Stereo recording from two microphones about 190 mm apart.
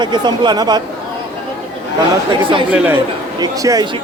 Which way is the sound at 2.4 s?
25° right (ahead or behind).